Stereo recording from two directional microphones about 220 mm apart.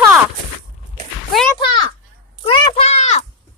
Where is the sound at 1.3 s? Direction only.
Centre (ahead or behind).